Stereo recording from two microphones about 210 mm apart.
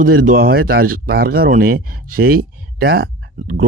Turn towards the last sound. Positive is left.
turn(degrees=-45)  # may be behind; listen again after turning